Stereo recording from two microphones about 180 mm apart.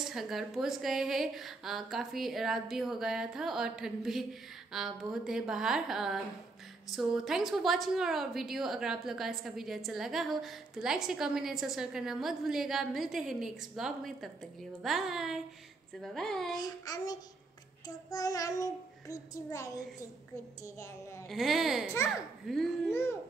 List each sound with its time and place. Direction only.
0.0 s a woman's voice: centre (ahead or behind)
16.5 s child singing: 20° left (ahead or behind)
21.3 s a woman's voice: centre (ahead or behind)